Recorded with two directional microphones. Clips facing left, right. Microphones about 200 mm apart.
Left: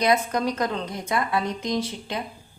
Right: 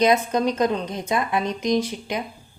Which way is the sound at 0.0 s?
20° right (ahead or behind).